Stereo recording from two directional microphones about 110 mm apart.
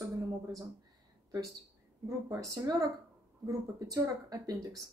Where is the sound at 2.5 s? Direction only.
30° right (ahead or behind).